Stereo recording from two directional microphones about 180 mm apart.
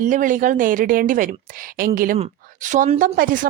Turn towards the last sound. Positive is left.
turn(degrees=-50)  # may be behind; listen again after turning